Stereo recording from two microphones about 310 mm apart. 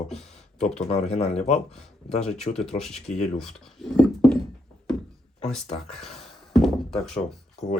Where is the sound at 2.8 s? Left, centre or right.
Centre.